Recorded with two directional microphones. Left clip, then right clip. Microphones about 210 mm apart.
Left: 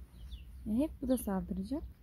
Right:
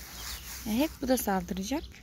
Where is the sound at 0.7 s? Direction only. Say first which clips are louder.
Right 5 dB; 10° left (ahead or behind).